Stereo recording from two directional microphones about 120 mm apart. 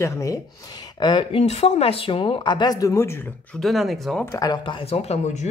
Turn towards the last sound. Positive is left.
turn(degrees=70)  # may be behind; listen again after turning